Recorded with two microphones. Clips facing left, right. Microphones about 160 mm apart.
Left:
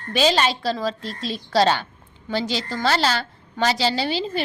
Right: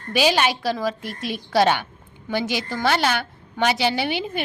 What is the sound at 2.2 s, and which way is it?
Speech, 20° right (ahead or behind).